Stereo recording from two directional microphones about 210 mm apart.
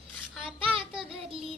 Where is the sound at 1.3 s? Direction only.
25° right (ahead or behind).